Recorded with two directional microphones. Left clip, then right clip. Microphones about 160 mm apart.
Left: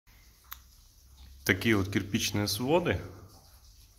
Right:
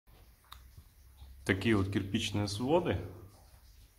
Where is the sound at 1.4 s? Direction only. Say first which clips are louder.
Left 4 dB; 10° left (ahead or behind).